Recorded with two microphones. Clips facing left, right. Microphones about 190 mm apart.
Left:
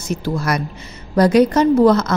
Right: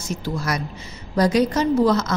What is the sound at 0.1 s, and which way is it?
A woman's voice, 60° left (ahead or behind).